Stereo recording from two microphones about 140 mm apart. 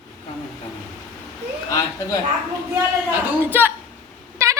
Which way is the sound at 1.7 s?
25° left (ahead or behind).